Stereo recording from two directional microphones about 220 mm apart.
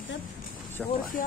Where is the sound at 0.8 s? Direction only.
Centre (ahead or behind).